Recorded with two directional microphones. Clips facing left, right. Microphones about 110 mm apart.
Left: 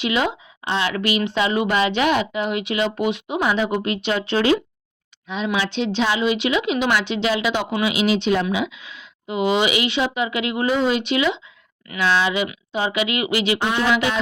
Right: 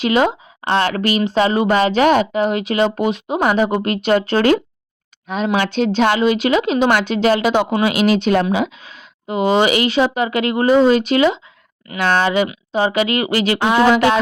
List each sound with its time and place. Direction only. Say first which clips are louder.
0.0 s speech: right 6 dB; 40° right (ahead or behind)
13.6 s speech: right 7 dB; 90° right
13.8 s speech: right 7 dB; 45° right (ahead or behind)